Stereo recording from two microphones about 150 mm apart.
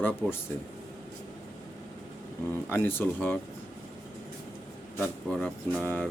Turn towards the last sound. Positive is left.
turn(degrees=15)  # may be behind; listen again after turning